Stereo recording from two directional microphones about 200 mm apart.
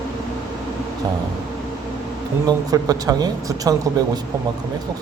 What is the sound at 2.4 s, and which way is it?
Speech, 20° right (ahead or behind).